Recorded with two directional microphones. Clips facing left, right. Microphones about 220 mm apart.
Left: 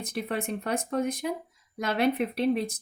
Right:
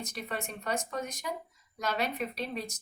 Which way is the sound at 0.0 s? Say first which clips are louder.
Left 7 dB; 55° left (ahead or behind).